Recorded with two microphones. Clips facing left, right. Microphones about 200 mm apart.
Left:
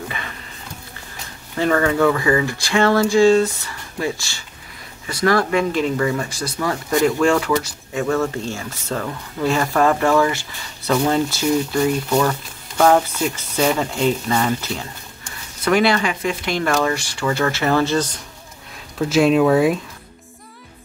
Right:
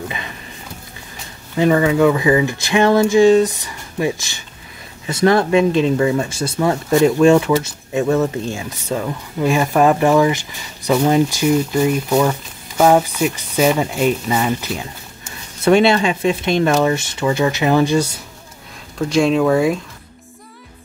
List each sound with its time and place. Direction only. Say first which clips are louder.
1.6 s speech: right 3 dB; 15° right (ahead or behind)
15.6 s speech: right 4 dB; 25° right (ahead or behind)
18.9 s speech: even; 5° left (ahead or behind)